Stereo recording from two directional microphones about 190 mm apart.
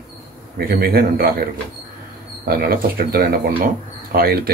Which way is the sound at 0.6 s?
50° right (ahead or behind).